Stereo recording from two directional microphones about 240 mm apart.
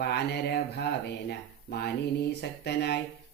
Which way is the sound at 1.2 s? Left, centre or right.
Left.